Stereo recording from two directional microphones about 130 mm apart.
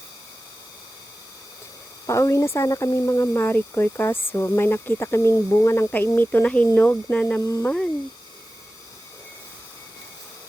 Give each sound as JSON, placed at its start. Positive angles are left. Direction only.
{"t": 2.0, "sound": "speech", "side_deg": 25}
{"t": 7.4, "sound": "speech", "side_deg": 25}